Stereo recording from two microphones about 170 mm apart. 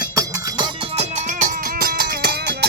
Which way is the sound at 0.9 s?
45° right (ahead or behind).